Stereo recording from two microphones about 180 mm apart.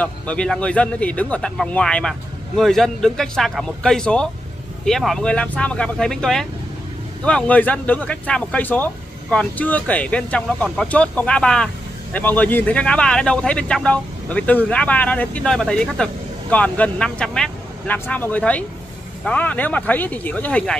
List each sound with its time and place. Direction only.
0.0 s speech: 5° left (ahead or behind)